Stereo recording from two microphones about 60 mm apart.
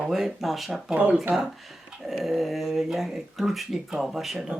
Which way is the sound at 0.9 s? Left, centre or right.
Right.